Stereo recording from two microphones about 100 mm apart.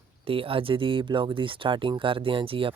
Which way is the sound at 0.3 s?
65° right (ahead or behind).